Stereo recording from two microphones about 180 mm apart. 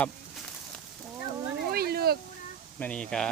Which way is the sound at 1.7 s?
60° right (ahead or behind).